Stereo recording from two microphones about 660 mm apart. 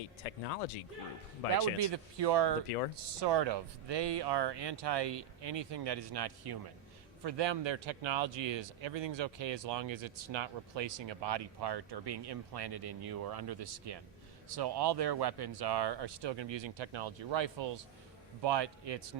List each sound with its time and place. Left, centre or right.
0.2 s speech: left
1.5 s speech: right